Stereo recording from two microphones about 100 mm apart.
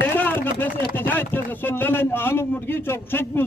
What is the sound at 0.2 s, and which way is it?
Speech, 20° left (ahead or behind).